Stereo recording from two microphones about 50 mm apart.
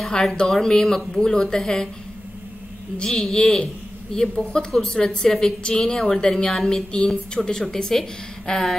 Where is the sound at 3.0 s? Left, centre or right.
Centre.